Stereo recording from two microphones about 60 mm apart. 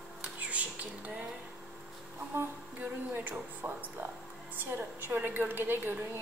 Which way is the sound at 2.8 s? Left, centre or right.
Right.